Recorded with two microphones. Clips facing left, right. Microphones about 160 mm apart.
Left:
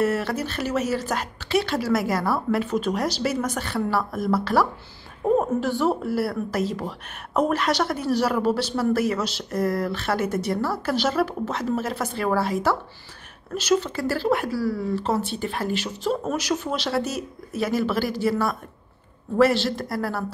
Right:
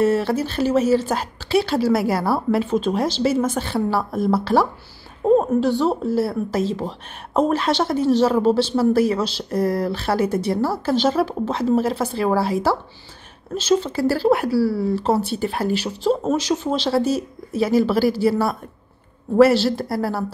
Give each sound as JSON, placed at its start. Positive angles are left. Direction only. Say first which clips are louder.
{"t": 0.0, "sound": "a woman's voice", "louder": "right 5 dB", "side_deg": -30}